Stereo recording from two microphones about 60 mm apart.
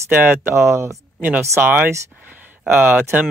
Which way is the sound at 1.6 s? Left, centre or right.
Right.